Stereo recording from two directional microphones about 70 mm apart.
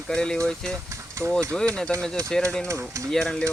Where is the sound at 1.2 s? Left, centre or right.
Right.